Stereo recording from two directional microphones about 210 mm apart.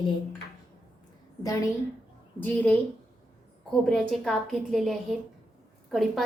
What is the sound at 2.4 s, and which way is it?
Speech, 10° left (ahead or behind).